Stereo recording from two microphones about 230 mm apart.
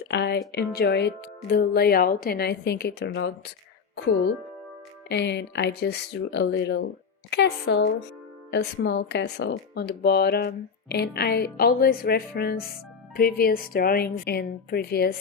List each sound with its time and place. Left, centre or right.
0.1 s speech: left
5.0 s a woman's voice: left